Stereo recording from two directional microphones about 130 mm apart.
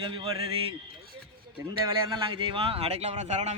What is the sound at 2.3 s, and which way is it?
Speech, 40° right (ahead or behind).